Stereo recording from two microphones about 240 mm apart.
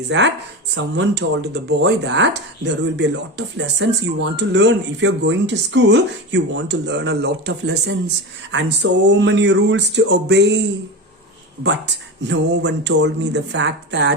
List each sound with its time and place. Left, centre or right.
0.1 s speech: right
12.3 s speech: right